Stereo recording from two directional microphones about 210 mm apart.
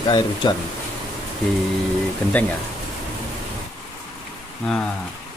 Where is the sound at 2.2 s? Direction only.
5° left (ahead or behind).